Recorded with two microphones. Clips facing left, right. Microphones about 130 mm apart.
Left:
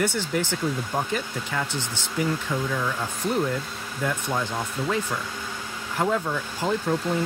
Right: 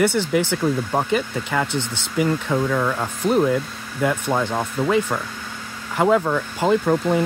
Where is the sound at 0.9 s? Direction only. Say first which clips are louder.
Right 6 dB; 85° right.